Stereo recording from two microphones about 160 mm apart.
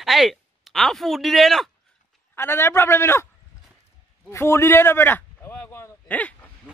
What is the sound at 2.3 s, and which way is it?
Speech, 15° left (ahead or behind).